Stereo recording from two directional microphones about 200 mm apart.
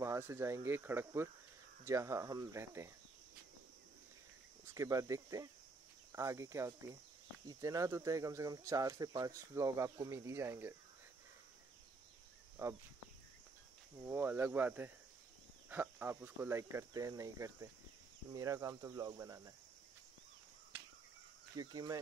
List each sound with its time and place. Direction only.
0.0 s speech: 15° right (ahead or behind)
4.7 s speech: 15° right (ahead or behind)
12.6 s speech: 10° right (ahead or behind)
13.9 s speech: 10° right (ahead or behind)
21.5 s speech: 20° right (ahead or behind)